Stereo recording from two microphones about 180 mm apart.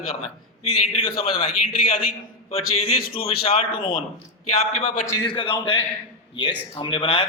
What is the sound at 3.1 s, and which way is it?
Speech, 30° left (ahead or behind).